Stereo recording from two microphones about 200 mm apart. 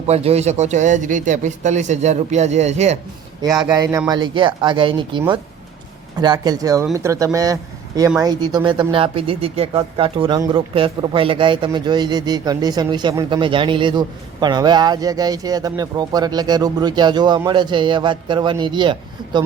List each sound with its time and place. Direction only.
0.1 s speech: 30° right (ahead or behind)
3.7 s speech: 15° right (ahead or behind)